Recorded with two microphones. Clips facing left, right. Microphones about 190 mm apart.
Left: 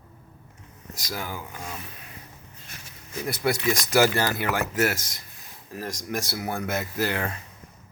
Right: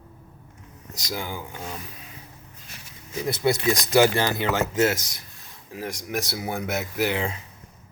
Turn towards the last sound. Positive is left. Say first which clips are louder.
# right 2 dB
turn(degrees=-15)  # may be behind; listen again after turning